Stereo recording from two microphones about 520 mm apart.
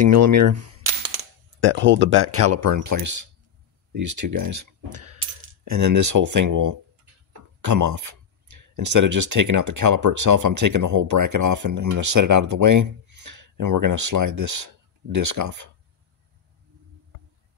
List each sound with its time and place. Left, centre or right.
0.0 s speech: right